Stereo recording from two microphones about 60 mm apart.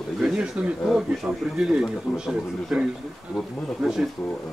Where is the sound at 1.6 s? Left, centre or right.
Centre.